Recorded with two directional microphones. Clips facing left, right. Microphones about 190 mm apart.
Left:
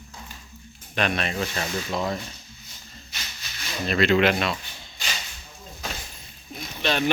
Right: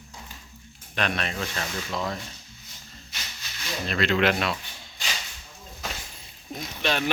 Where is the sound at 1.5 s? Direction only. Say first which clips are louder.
Left 3 dB; 20° left (ahead or behind).